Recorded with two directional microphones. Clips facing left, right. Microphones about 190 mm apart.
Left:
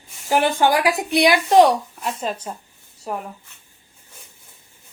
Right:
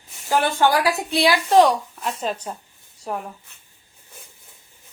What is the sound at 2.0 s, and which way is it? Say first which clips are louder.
Speech: even; 5° left (ahead or behind).